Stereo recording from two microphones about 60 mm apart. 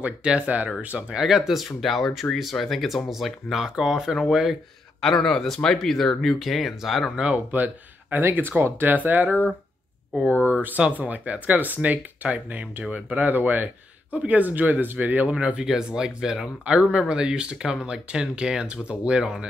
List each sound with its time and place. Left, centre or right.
0.0 s speech: centre
1.2 s speech: centre
5.0 s speech: centre
7.2 s speech: right
8.2 s speech: right
15.3 s speech: centre